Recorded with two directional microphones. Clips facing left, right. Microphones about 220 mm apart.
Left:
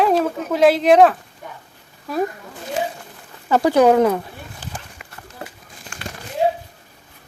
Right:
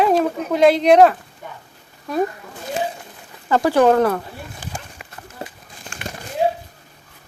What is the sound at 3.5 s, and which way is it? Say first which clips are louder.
Speech: left 1 dB; 15° left (ahead or behind).